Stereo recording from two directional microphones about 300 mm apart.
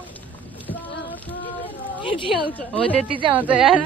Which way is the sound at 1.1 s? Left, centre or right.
Centre.